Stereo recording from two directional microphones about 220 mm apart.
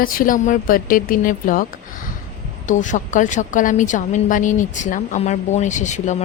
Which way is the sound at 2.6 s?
35° left (ahead or behind).